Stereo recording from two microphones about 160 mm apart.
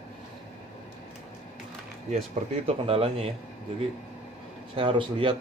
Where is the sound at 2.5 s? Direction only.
40° right (ahead or behind).